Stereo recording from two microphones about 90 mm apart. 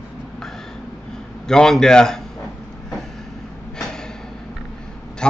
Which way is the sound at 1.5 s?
5° left (ahead or behind).